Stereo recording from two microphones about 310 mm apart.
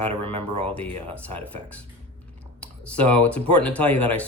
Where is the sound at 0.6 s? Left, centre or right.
Centre.